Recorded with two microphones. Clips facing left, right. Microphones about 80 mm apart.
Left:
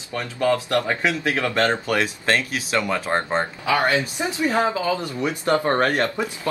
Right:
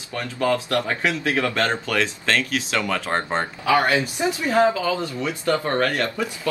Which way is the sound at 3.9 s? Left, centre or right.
Left.